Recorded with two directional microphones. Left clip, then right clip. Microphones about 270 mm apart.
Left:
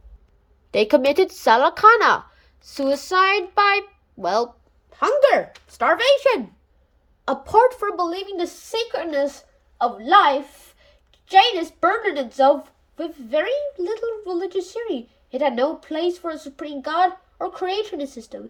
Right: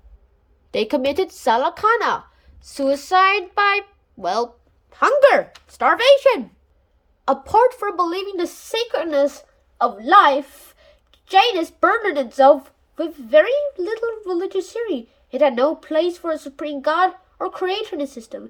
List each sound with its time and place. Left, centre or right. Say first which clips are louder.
0.7 s a woman's voice: left 3 dB; centre